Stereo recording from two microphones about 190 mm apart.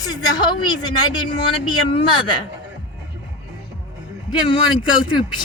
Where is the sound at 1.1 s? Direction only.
25° left (ahead or behind).